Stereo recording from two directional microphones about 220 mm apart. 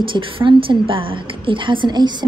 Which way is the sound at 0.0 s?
20° right (ahead or behind).